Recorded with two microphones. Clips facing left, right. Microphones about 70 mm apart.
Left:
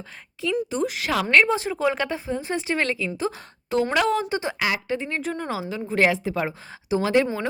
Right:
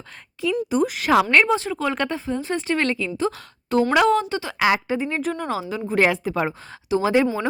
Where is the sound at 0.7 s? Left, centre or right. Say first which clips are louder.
Right 6 dB; centre.